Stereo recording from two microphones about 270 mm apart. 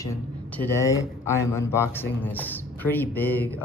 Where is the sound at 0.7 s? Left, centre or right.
Centre.